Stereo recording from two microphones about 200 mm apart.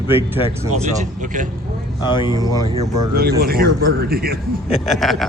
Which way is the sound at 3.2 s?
50° right (ahead or behind).